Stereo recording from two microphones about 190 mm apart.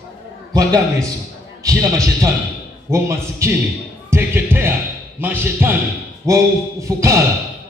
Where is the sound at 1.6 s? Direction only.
15° right (ahead or behind).